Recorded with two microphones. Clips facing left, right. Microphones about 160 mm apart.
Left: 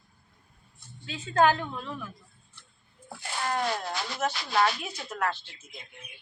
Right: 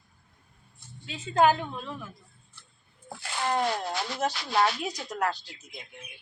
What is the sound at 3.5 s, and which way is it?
Speech, 30° right (ahead or behind).